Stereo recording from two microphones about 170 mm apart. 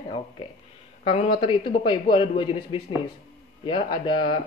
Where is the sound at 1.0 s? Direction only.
35° left (ahead or behind).